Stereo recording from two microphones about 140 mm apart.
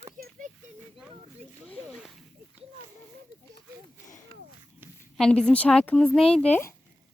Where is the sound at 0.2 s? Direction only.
70° right (ahead or behind).